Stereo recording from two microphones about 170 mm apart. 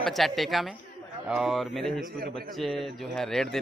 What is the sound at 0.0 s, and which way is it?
Speech, centre (ahead or behind).